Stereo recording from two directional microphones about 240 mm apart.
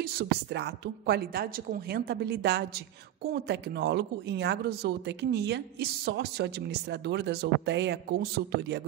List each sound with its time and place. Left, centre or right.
0.0 s a woman's voice: right